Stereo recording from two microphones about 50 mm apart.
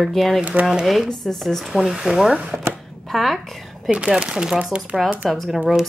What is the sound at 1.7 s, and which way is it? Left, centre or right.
Speech, centre.